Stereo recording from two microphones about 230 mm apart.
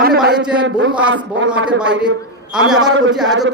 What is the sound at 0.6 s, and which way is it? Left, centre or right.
Speech, right.